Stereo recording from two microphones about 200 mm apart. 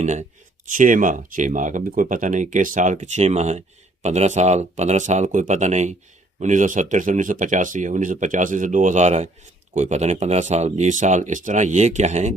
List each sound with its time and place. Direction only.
0.0 s speech: 35° right (ahead or behind)